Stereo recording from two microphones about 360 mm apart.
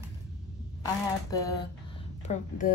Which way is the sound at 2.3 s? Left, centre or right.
Left.